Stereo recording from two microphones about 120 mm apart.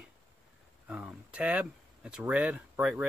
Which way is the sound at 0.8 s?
10° right (ahead or behind).